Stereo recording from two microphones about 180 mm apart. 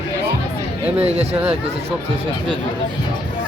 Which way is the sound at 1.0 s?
35° right (ahead or behind).